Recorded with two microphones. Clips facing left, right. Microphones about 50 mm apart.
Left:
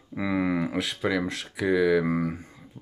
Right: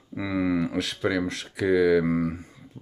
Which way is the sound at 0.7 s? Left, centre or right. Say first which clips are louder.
Right 1 dB; centre.